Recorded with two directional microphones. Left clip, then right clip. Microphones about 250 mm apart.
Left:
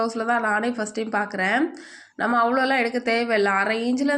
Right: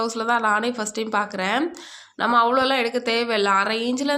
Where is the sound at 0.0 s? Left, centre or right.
Centre.